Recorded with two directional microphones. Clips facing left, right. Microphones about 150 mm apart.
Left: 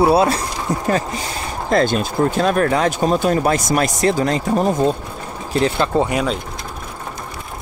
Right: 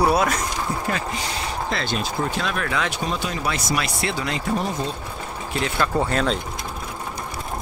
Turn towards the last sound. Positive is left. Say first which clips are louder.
# left 4 dB
turn(degrees=20)  # may be behind; listen again after turning